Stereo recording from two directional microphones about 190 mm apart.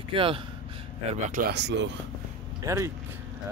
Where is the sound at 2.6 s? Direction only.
15° right (ahead or behind).